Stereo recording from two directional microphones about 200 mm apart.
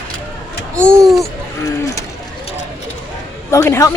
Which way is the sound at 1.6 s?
15° left (ahead or behind).